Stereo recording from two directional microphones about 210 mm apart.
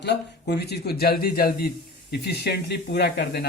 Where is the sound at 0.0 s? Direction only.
50° left (ahead or behind).